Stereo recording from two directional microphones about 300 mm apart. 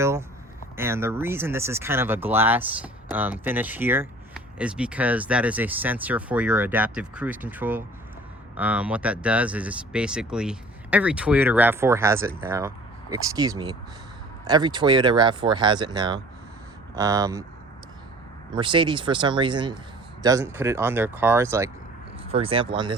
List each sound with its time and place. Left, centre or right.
0.0 s speech: centre
18.5 s speech: centre